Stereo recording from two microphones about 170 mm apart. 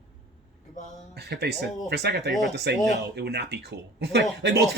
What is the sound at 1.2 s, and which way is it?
Speech, 75° right (ahead or behind).